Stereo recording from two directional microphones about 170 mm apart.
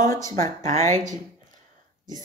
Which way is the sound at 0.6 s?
45° right (ahead or behind).